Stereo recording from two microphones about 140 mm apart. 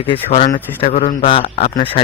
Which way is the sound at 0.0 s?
45° left (ahead or behind).